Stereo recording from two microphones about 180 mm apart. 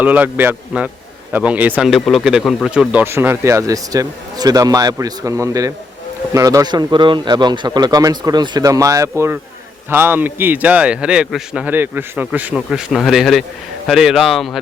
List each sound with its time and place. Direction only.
0.0 s a man's voice: 10° right (ahead or behind)